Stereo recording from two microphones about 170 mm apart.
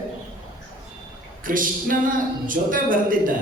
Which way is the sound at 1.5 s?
55° right (ahead or behind).